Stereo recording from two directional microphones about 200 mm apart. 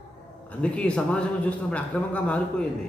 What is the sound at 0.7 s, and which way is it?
Speech, 5° left (ahead or behind).